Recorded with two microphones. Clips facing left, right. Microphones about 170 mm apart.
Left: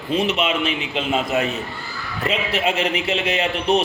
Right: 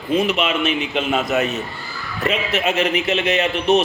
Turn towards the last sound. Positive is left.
turn(degrees=30)  # may be behind; listen again after turning